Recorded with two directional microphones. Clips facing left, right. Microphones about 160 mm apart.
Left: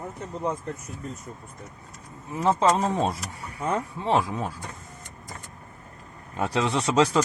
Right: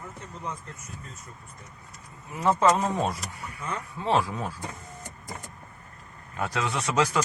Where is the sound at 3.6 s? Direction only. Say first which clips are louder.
Left 8 dB; 35° left (ahead or behind).